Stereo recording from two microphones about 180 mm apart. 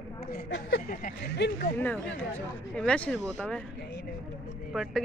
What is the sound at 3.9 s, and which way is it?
Vehicle, 75° left (ahead or behind).